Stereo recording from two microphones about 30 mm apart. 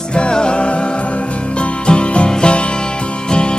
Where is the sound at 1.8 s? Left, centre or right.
Left.